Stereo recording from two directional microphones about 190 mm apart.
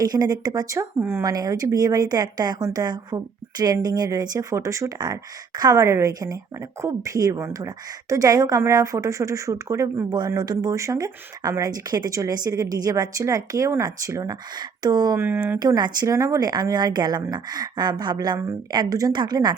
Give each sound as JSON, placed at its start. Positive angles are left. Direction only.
{"t": 0.0, "sound": "a woman's voice", "side_deg": -20}
{"t": 15.5, "sound": "speech", "side_deg": -20}